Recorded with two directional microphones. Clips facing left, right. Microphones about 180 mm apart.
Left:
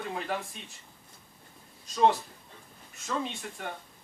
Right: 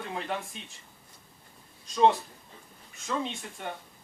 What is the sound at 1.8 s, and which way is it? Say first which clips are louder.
Speech: right 1 dB; centre (ahead or behind).